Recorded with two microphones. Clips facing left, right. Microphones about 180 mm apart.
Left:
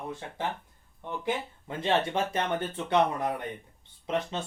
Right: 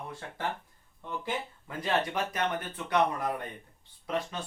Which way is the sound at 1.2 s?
25° left (ahead or behind).